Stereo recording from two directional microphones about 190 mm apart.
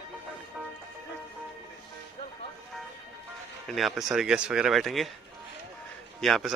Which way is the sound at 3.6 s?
Centre (ahead or behind).